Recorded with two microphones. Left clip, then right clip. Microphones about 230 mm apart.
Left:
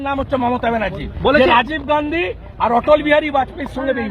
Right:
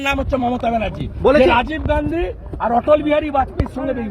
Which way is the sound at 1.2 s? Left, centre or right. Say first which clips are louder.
Even; centre.